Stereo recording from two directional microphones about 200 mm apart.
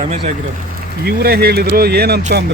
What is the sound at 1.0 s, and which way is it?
Speech, 50° right (ahead or behind).